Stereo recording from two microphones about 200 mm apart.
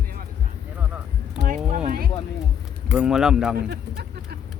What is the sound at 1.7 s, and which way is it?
Speech, 40° right (ahead or behind).